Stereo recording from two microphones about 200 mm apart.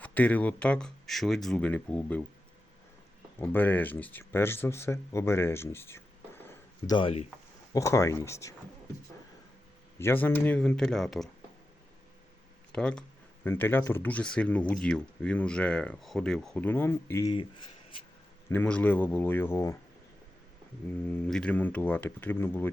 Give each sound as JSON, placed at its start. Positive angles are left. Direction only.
{"t": 0.0, "sound": "speech", "side_deg": 5}
{"t": 3.3, "sound": "speech", "side_deg": 10}
{"t": 6.8, "sound": "speech", "side_deg": 25}
{"t": 7.7, "sound": "speech", "side_deg": 15}
{"t": 10.0, "sound": "speech", "side_deg": 10}
{"t": 12.7, "sound": "speech", "side_deg": 5}
{"t": 18.4, "sound": "speech", "side_deg": 10}
{"t": 20.9, "sound": "speech", "side_deg": 5}